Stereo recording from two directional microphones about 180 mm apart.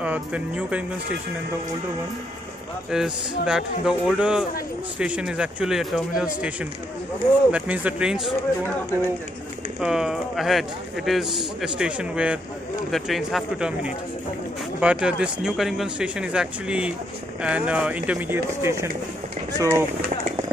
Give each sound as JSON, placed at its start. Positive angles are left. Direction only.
{"t": 0.0, "sound": "speech", "side_deg": -5}
{"t": 2.9, "sound": "a man's voice", "side_deg": -5}
{"t": 9.8, "sound": "a man's voice", "side_deg": -5}